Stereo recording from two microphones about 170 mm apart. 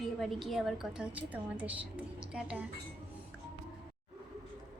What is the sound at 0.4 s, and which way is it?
A woman's voice, centre (ahead or behind).